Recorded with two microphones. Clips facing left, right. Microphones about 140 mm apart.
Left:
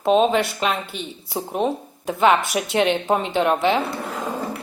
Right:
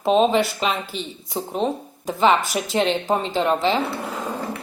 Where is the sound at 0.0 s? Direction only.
Centre (ahead or behind).